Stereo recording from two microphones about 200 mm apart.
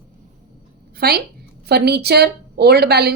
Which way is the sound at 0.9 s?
50° right (ahead or behind).